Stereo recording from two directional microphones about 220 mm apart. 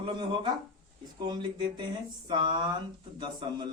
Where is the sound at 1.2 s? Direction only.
20° right (ahead or behind).